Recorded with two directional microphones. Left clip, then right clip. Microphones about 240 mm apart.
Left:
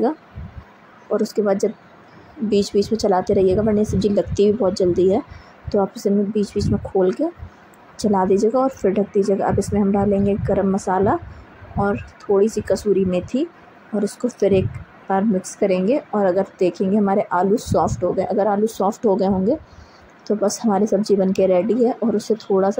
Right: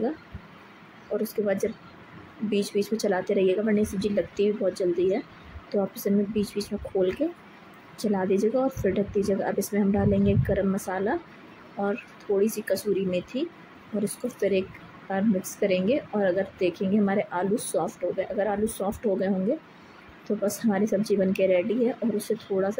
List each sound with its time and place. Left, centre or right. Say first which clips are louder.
1.1 s speech: left 8 dB; centre